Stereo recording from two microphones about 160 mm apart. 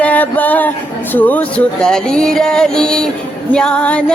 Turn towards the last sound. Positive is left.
turn(degrees=5)  # may be behind; listen again after turning